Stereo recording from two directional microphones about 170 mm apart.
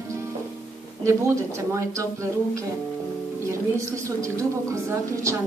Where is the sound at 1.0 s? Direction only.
15° right (ahead or behind).